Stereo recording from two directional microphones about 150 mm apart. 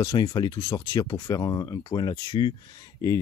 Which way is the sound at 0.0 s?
25° left (ahead or behind).